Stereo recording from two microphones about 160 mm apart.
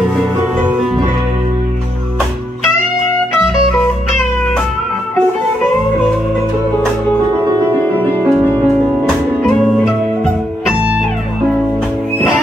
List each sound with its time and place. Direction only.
8.0 s music: 10° left (ahead or behind)
9.8 s music: 5° right (ahead or behind)